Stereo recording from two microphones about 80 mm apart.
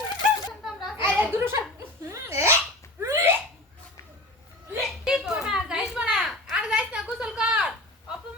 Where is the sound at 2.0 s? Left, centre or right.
Right.